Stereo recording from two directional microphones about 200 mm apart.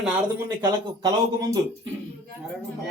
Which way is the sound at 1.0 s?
20° right (ahead or behind).